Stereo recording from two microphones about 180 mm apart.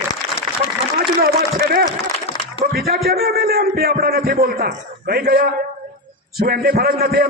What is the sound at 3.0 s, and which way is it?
A man's voice, 60° right (ahead or behind).